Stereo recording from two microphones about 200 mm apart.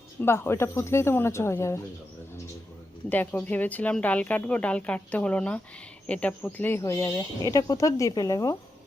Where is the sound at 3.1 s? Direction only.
10° left (ahead or behind).